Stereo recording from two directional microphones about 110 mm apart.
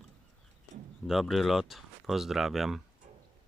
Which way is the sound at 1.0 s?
5° right (ahead or behind).